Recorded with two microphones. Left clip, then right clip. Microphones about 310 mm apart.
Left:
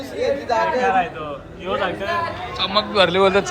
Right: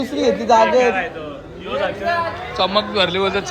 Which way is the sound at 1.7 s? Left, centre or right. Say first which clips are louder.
Right 1 dB; left.